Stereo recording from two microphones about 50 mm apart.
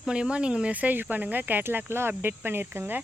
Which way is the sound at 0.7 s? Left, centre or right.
Right.